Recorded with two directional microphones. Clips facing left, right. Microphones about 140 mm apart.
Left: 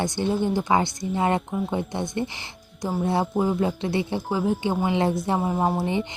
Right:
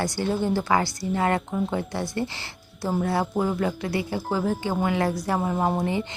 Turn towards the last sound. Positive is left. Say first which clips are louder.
# left 1 dB
turn(degrees=5)  # may be behind; listen again after turning